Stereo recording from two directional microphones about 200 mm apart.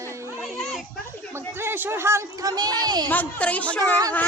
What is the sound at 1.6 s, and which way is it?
A woman's voice, 10° right (ahead or behind).